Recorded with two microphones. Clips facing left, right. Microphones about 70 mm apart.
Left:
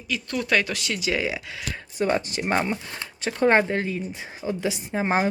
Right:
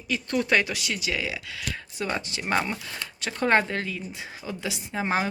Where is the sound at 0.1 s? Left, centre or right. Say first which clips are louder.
Even; right.